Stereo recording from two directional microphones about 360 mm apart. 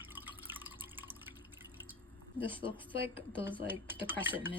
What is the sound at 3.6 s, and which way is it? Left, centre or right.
Speech, centre.